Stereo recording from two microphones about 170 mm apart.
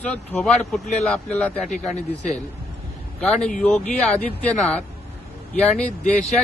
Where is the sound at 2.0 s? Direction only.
45° left (ahead or behind).